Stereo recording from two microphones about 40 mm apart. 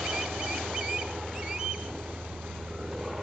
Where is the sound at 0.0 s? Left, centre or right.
Centre.